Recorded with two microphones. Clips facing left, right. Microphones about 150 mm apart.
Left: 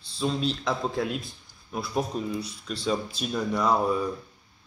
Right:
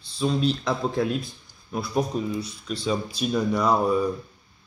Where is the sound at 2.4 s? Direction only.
30° left (ahead or behind).